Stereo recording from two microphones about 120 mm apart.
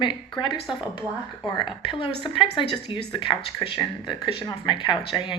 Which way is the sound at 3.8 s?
35° left (ahead or behind).